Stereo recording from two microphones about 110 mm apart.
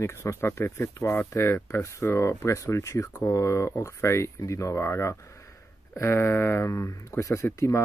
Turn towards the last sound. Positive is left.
turn(degrees=25)  # may be behind; listen again after turning